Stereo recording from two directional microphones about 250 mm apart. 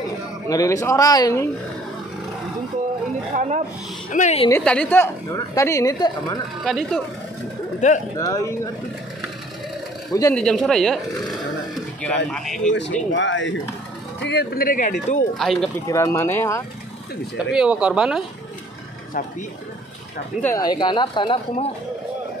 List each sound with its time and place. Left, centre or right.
0.5 s a woman's voice: centre
3.3 s speech: right
4.1 s a woman's voice: left
4.5 s a woman's voice: centre
6.6 s speech: centre
7.8 s a woman's voice: left
8.2 s a woman's voice: centre
10.1 s speech: centre
13.1 s speech: left
15.3 s speech: centre
15.9 s a woman's voice: centre
17.5 s speech: centre
20.4 s a woman's voice: centre